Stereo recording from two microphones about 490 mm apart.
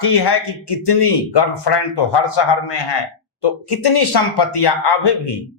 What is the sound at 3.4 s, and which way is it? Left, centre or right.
Speech, left.